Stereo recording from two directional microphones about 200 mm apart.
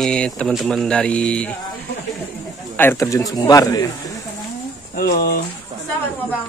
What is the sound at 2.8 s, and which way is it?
A man's voice, 15° left (ahead or behind).